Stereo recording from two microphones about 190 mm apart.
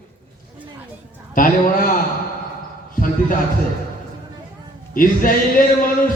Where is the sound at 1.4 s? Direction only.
45° left (ahead or behind).